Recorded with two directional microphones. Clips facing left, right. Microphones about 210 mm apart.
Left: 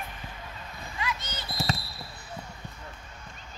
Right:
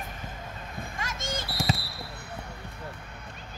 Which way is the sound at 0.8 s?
45° right (ahead or behind).